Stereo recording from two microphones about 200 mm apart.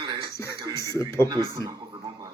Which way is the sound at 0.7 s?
15° left (ahead or behind).